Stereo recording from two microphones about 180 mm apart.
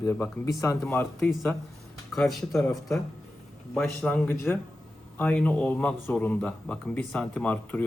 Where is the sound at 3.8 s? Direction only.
5° left (ahead or behind).